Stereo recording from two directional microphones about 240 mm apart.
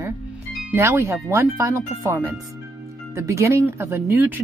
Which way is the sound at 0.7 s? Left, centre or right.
Centre.